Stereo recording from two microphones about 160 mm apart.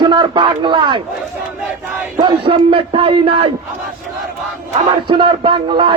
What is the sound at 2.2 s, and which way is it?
Speech, 30° right (ahead or behind).